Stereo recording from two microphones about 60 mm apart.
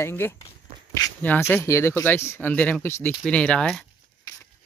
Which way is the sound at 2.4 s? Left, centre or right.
Left.